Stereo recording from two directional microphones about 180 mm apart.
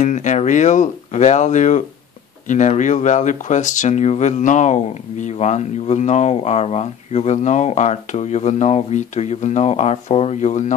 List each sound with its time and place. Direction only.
0.0 s speech: 40° left (ahead or behind)